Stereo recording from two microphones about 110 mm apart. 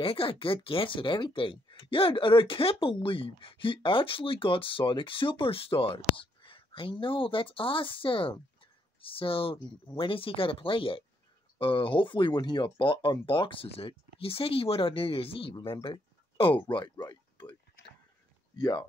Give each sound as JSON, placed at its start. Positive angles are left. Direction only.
{"t": 0.0, "sound": "speech", "side_deg": 55}
{"t": 18.6, "sound": "speech", "side_deg": 40}